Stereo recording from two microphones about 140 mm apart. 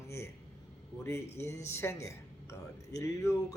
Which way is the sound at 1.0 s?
20° left (ahead or behind).